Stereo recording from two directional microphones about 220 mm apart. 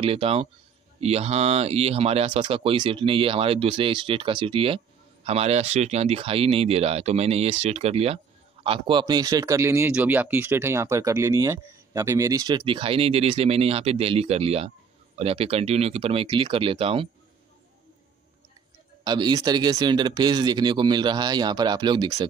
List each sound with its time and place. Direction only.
0.0 s a man's voice: 25° right (ahead or behind)
19.0 s speech: 20° right (ahead or behind)